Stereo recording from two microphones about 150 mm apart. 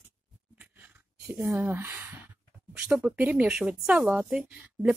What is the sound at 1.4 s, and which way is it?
Speech, 15° right (ahead or behind).